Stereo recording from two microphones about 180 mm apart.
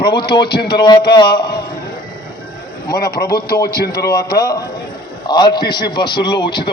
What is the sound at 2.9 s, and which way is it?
A man's voice, 60° left (ahead or behind).